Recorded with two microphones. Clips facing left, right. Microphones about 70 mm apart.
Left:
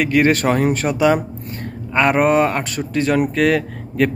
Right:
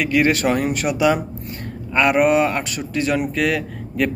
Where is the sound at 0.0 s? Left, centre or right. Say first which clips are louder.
Left 2 dB; left.